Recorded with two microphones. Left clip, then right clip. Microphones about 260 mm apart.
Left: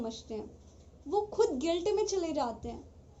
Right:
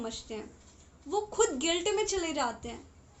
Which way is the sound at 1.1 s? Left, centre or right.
Right.